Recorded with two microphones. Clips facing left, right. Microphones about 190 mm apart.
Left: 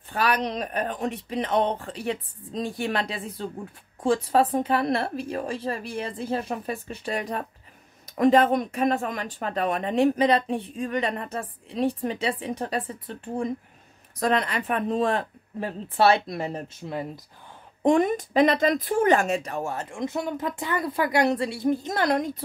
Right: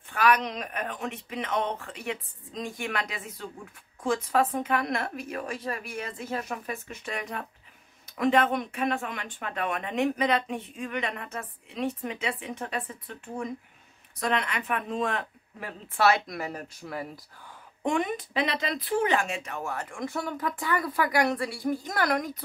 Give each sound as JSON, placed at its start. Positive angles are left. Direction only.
{"t": 0.1, "sound": "speech", "side_deg": 35}
{"t": 17.8, "sound": "speech", "side_deg": 40}